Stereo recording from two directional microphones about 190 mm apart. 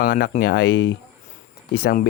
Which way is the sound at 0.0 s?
50° left (ahead or behind).